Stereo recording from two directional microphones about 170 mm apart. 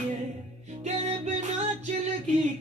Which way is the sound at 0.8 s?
40° right (ahead or behind).